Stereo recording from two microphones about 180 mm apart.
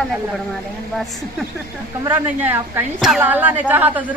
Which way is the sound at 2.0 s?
15° right (ahead or behind).